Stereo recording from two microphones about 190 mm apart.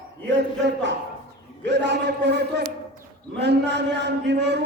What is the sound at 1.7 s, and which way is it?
A man's voice, 65° right (ahead or behind).